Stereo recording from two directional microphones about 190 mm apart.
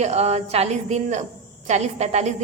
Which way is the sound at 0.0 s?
35° right (ahead or behind).